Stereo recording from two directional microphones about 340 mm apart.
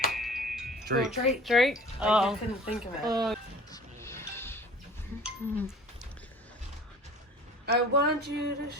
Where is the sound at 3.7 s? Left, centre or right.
Centre.